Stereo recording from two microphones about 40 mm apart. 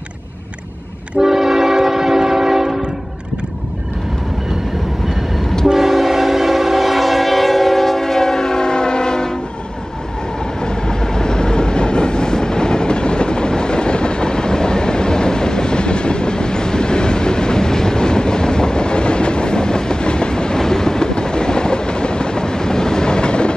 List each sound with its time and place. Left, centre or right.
1.2 s train: centre
5.7 s train: centre
10.6 s train: centre